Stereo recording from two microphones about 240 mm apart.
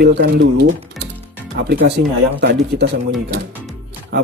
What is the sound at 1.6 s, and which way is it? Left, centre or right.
Speech, right.